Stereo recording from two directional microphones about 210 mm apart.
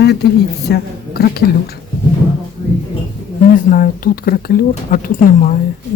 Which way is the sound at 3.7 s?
45° left (ahead or behind).